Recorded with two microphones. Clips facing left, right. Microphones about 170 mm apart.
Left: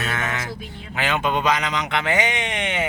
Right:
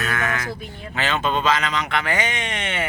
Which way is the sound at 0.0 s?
25° left (ahead or behind).